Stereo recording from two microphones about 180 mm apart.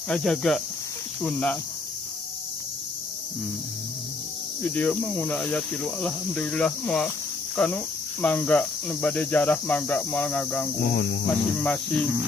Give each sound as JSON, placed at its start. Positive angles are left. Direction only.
{"t": 0.1, "sound": "speech", "side_deg": 5}
{"t": 1.2, "sound": "cricket", "side_deg": 5}
{"t": 4.7, "sound": "cricket", "side_deg": 10}
{"t": 10.8, "sound": "speech", "side_deg": 60}
{"t": 11.3, "sound": "speech", "side_deg": 5}